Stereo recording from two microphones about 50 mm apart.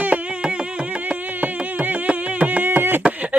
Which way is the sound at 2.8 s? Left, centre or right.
Right.